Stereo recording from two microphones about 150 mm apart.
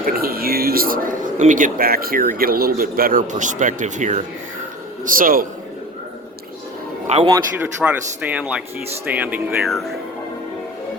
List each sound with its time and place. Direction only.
0.0 s speech: 80° right; by 4.2 s 55° right (ahead or behind)
5.0 s speech: 70° right (ahead or behind)
7.1 s a man's voice: 45° right (ahead or behind)
7.8 s speech: 10° right (ahead or behind)
9.6 s speech: centre (ahead or behind)